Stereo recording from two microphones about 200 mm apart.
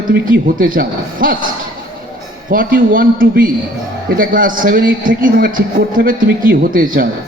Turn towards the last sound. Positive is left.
turn(degrees=-45)  # may be behind; listen again after turning